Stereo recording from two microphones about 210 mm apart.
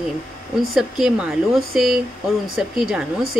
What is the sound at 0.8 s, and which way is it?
A man's voice, centre (ahead or behind).